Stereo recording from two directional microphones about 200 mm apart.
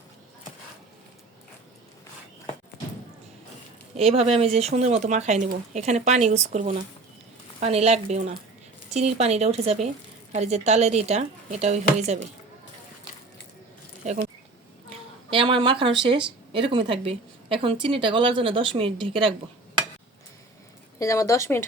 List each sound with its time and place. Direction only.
3.9 s speech: 30° right (ahead or behind)
14.0 s speech: 35° right (ahead or behind)
14.8 s a sound: 25° right (ahead or behind)
16.0 s a woman's voice: 25° right (ahead or behind)
21.0 s a woman's voice: 15° left (ahead or behind)